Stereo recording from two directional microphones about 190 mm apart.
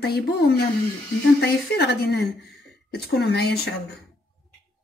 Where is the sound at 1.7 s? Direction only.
60° left (ahead or behind).